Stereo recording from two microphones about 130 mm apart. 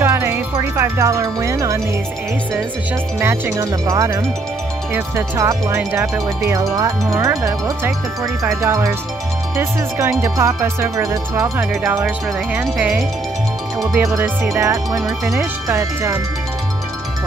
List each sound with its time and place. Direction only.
0.0 s music: 20° right (ahead or behind)
3.2 s music: 20° right (ahead or behind)
5.8 s speech: 15° right (ahead or behind)
6.7 s music: 25° right (ahead or behind)
11.7 s speech: 15° right (ahead or behind)
13.9 s music: 15° right (ahead or behind)
15.0 s speech: 5° right (ahead or behind)
15.7 s music: 25° right (ahead or behind)